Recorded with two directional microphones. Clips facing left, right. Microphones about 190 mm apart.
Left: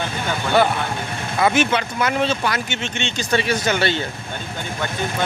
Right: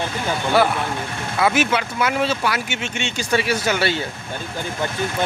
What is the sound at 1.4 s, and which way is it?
Speech, 5° right (ahead or behind).